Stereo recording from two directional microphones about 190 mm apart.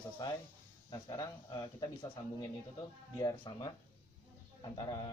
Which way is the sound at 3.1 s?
20° left (ahead or behind).